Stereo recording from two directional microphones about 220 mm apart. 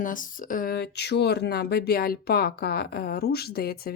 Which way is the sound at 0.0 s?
40° left (ahead or behind).